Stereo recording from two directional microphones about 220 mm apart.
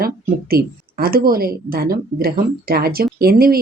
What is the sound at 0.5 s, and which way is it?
Speech, 45° right (ahead or behind).